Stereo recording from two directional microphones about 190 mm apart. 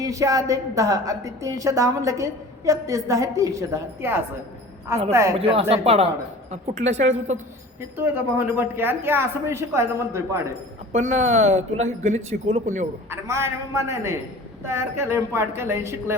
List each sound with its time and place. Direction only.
0.0 s a woman's voice: 15° right (ahead or behind)
5.4 s speech: 30° right (ahead or behind)
6.9 s a woman's voice: 80° right
7.8 s a woman's voice: 10° right (ahead or behind)
10.9 s speech: 35° right (ahead or behind)
13.1 s a woman's voice: 15° right (ahead or behind)